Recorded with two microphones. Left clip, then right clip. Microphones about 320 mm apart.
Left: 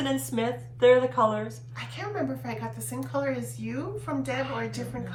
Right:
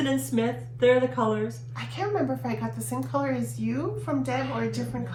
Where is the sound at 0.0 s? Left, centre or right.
Centre.